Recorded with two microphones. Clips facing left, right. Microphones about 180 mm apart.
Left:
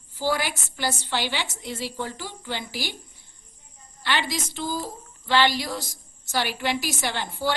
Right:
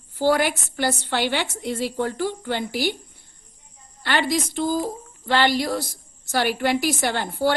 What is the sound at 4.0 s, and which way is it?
A woman's voice, 55° right (ahead or behind).